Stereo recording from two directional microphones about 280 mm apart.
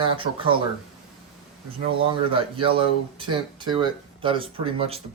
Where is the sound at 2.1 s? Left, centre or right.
Centre.